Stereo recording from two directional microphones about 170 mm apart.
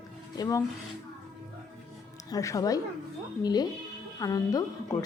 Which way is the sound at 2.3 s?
20° left (ahead or behind).